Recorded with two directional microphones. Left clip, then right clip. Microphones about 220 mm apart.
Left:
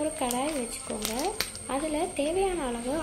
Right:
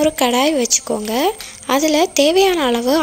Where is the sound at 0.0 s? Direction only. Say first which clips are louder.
Right 15 dB; 50° right (ahead or behind).